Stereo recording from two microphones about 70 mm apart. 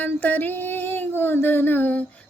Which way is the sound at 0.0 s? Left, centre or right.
Left.